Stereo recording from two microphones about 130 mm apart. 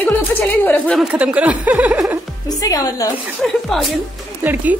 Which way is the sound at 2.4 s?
30° left (ahead or behind).